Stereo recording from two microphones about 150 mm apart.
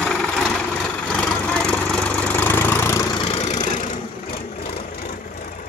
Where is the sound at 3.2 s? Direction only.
40° left (ahead or behind).